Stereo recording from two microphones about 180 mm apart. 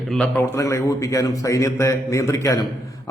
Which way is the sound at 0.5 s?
15° left (ahead or behind).